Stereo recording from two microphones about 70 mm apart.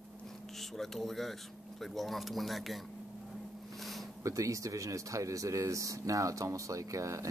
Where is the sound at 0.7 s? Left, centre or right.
Centre.